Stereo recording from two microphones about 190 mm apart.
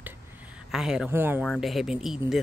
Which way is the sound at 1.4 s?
Centre (ahead or behind).